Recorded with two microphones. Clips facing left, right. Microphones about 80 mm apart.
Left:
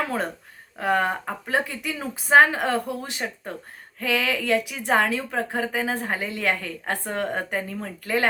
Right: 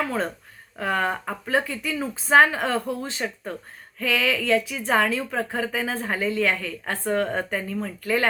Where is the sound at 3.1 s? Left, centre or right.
Centre.